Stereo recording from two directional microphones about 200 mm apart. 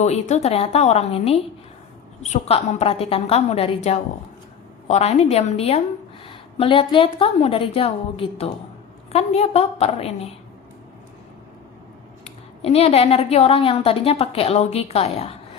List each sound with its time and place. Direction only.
0.0 s a woman's voice: 35° left (ahead or behind)
4.9 s a woman's voice: 35° left (ahead or behind)
12.2 s a woman's voice: 30° left (ahead or behind)